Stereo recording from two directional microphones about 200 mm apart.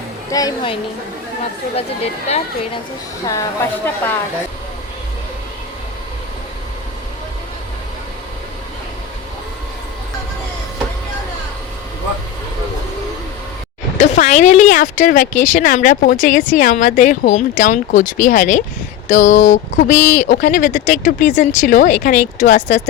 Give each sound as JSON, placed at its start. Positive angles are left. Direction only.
{"t": 0.3, "sound": "a woman's voice", "side_deg": 20}
{"t": 3.2, "sound": "speech", "side_deg": 15}
{"t": 14.0, "sound": "speech", "side_deg": 35}